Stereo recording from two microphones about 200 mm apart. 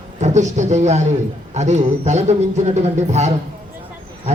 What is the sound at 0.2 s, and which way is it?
A man's voice, 35° right (ahead or behind).